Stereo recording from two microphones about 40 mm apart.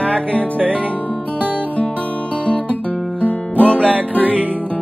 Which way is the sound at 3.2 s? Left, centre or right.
Left.